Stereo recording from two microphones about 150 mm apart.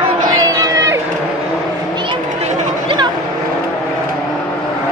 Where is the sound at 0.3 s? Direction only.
25° right (ahead or behind).